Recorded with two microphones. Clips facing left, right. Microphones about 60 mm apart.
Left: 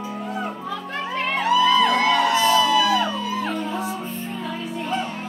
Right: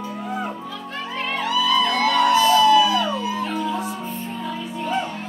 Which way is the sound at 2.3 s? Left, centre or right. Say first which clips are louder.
Right 2 dB; centre.